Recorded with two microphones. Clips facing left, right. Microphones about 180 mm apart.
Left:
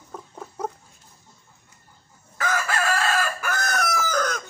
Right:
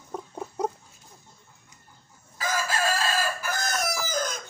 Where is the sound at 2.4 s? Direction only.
65° left (ahead or behind).